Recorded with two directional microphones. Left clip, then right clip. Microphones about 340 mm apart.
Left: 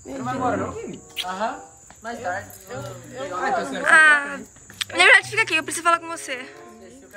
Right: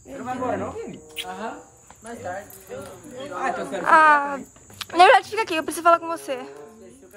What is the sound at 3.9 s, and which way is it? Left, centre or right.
A woman's voice, centre.